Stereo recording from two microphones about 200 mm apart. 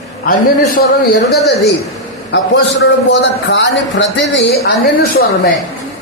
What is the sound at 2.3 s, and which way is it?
A man's voice, 65° left (ahead or behind).